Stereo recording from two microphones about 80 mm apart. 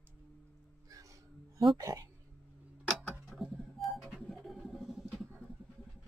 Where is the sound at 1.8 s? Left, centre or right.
Right.